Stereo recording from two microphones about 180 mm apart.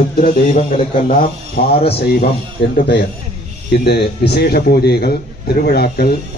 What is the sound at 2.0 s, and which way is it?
Speech, 60° left (ahead or behind).